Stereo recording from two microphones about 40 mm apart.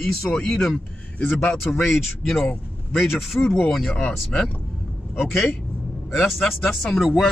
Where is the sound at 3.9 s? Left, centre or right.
Left.